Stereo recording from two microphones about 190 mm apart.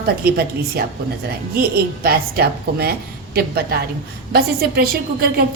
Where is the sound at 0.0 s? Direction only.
55° right (ahead or behind).